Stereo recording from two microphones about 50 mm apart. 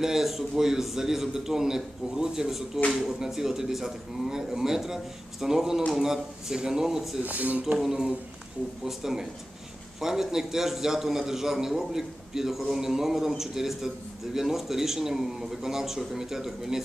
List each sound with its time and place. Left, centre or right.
0.0 s a man's voice: centre
7.2 s speech: right
7.8 s a man's voice: centre